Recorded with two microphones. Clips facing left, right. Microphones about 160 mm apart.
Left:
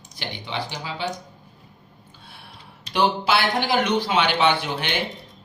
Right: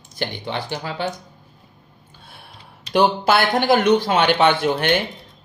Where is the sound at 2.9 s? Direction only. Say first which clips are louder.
Right 4 dB; 45° right (ahead or behind).